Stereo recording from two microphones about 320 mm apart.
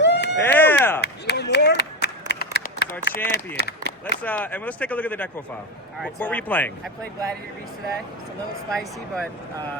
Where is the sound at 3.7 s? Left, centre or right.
Left.